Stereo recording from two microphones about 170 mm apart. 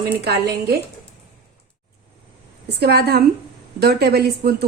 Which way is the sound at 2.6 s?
70° right (ahead or behind).